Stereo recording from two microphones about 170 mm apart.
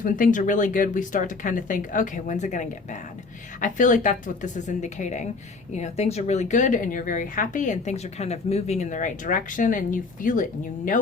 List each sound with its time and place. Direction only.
0.0 s speech: 50° left (ahead or behind)